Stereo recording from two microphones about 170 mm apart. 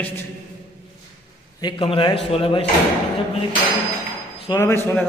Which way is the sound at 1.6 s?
30° left (ahead or behind).